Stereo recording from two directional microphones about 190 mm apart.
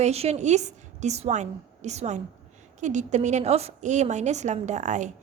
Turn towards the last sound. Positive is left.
turn(degrees=-40)  # may be behind; listen again after turning